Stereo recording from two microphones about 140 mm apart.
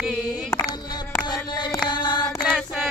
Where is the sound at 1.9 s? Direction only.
30° left (ahead or behind).